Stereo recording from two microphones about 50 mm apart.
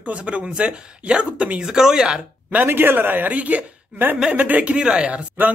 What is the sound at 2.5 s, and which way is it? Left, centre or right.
A man's voice, right.